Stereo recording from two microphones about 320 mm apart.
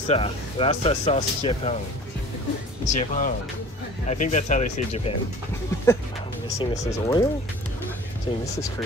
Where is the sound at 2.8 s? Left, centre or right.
Left.